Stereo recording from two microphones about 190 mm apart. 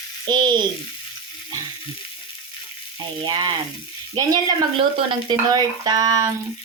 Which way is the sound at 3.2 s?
20° right (ahead or behind).